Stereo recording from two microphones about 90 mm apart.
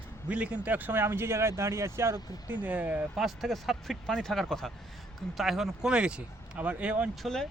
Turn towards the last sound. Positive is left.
turn(degrees=5)  # may be behind; listen again after turning